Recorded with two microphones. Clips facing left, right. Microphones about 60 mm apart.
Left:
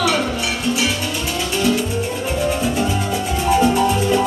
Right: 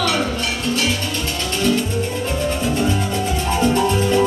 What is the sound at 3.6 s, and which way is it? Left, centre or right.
Music, centre.